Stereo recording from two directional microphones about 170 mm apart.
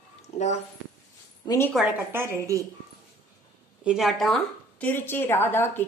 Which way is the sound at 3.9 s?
Centre (ahead or behind).